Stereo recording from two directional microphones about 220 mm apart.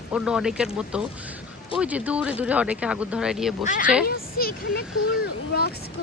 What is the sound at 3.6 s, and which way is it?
Speech, 35° left (ahead or behind).